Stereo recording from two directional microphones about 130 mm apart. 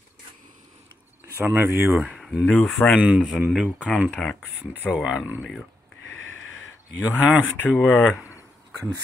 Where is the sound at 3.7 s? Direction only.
10° left (ahead or behind); by 5.3 s 5° right (ahead or behind).